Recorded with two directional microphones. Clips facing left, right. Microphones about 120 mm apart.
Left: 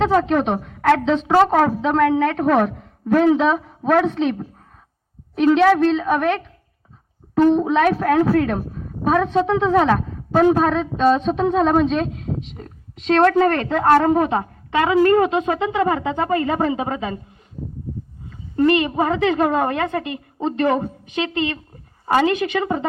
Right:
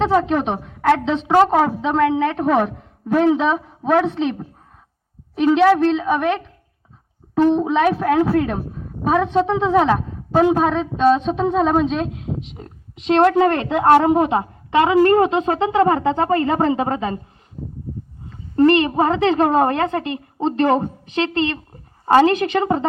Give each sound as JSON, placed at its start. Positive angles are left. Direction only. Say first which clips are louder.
{"t": 0.0, "sound": "a woman's voice", "louder": "even", "side_deg": -5}
{"t": 18.3, "sound": "a woman's voice", "louder": "right 3 dB", "side_deg": -35}